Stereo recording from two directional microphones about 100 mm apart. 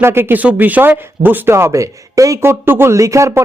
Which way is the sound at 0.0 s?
25° right (ahead or behind).